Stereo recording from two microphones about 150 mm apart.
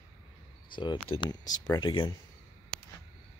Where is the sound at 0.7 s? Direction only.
30° left (ahead or behind).